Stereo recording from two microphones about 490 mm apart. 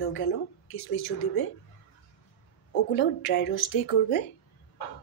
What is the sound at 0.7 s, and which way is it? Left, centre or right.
Speech, left.